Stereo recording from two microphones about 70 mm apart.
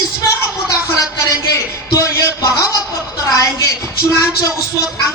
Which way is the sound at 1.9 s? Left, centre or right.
Left.